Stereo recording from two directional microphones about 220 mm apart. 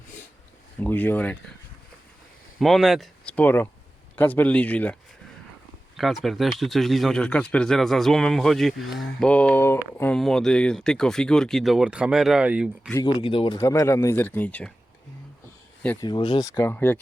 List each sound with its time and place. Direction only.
0.8 s speech: 10° left (ahead or behind)
2.6 s speech: centre (ahead or behind)
6.0 s speech: centre (ahead or behind)
12.9 s speech: 15° left (ahead or behind)
13.6 s speech: 15° left (ahead or behind)
16.0 s speech: 20° left (ahead or behind)
16.6 s speech: 10° left (ahead or behind)